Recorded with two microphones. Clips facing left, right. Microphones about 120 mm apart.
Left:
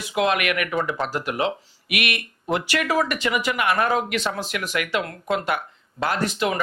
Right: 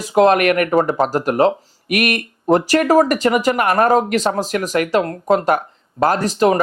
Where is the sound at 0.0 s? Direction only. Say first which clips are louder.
Right 9 dB; 40° right (ahead or behind).